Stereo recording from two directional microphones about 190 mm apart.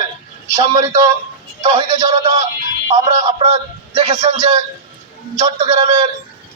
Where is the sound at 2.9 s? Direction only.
30° right (ahead or behind).